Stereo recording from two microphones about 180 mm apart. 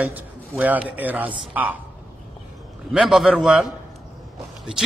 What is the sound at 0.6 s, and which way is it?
A man's voice, 10° right (ahead or behind).